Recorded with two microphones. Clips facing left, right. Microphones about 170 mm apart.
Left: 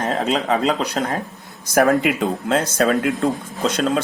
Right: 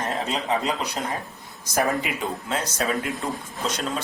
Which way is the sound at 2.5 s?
60° left (ahead or behind).